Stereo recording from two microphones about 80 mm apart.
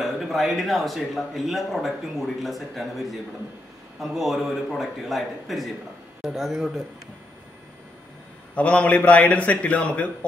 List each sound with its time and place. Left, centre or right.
0.0 s a man's voice: centre
8.5 s a man's voice: centre